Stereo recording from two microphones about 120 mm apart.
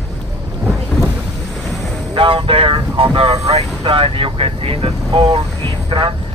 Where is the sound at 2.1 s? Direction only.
45° right (ahead or behind).